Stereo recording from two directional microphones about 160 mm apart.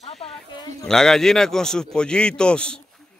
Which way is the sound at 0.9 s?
5° left (ahead or behind).